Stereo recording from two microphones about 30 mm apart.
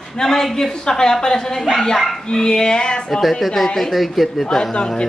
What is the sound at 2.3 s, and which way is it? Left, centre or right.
Speech, left.